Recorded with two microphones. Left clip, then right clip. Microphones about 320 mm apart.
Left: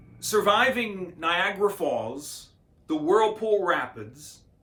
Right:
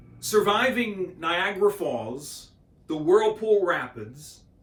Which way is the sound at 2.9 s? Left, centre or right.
Centre.